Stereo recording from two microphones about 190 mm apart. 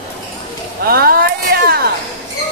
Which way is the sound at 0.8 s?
55° right (ahead or behind).